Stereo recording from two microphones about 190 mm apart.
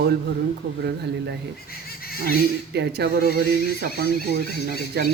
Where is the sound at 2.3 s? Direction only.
60° right (ahead or behind).